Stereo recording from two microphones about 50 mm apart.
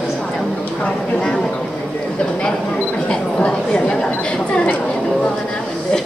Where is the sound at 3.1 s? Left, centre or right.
Centre.